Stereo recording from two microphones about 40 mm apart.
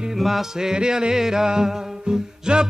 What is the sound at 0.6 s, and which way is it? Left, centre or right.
Music, centre.